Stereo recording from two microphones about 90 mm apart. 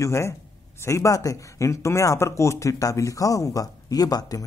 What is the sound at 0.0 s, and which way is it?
A man's voice, 30° left (ahead or behind).